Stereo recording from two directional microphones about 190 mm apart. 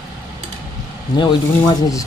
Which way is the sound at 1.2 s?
20° left (ahead or behind).